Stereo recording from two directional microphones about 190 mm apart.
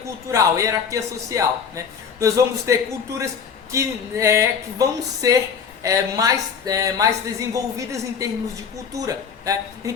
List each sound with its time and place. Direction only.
0.3 s a woman's voice: 15° right (ahead or behind)